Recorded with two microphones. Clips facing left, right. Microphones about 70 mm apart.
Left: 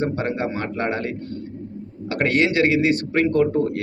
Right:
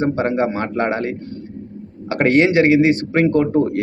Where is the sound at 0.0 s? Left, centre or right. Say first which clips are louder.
Right 5 dB; right.